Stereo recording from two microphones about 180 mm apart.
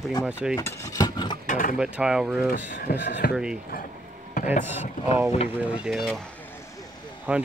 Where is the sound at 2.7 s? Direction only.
65° left (ahead or behind).